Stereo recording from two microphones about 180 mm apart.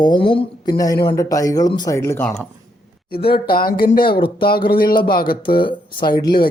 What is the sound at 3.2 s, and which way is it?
Speech, 60° left (ahead or behind).